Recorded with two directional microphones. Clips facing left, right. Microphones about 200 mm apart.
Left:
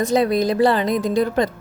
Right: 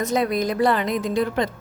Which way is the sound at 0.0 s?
30° left (ahead or behind).